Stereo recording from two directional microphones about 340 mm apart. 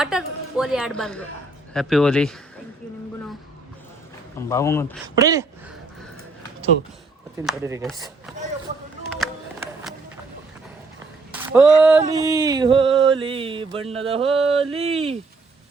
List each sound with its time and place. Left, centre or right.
0.0 s a woman's voice: centre
4.4 s speech: centre
5.0 s mantra: centre
7.3 s mantra: centre
7.9 s speech: centre
11.3 s a sound: centre
11.8 s mantra: centre